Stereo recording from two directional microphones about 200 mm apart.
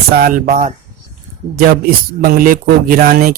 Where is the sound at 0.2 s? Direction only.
45° right (ahead or behind).